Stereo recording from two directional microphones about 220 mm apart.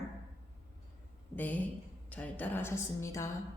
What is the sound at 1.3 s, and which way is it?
A woman's voice, 5° left (ahead or behind).